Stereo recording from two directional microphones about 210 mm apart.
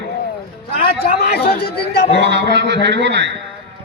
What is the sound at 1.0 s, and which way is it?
Speech, 45° left (ahead or behind).